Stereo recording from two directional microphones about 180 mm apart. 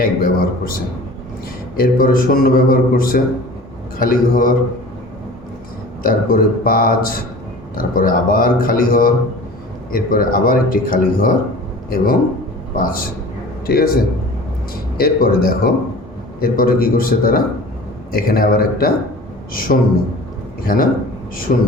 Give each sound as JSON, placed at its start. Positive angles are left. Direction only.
{"t": 0.0, "sound": "a man's voice", "side_deg": 55}
{"t": 6.0, "sound": "a man's voice", "side_deg": 50}
{"t": 12.7, "sound": "a man's voice", "side_deg": 50}